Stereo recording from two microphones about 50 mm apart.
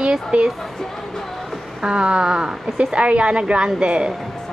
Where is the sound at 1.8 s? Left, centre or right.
Centre.